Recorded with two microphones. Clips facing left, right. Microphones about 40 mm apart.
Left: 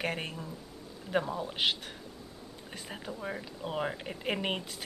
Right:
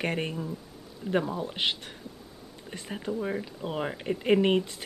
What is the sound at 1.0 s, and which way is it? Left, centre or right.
Speech, right.